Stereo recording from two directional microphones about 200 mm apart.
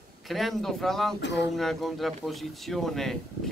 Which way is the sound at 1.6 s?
Centre (ahead or behind).